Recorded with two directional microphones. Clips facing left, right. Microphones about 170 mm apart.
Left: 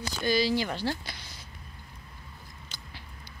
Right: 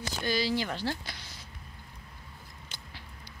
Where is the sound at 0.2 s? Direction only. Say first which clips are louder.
Left 4 dB; 5° left (ahead or behind).